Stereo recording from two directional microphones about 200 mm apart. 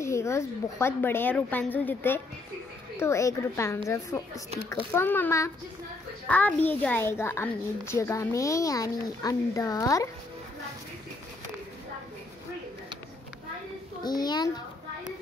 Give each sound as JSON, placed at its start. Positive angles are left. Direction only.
{"t": 0.0, "sound": "a child's voice", "side_deg": 15}
{"t": 14.0, "sound": "a child's voice", "side_deg": 20}